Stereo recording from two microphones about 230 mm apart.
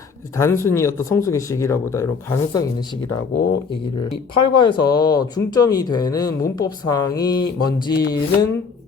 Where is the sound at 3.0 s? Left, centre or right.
Left.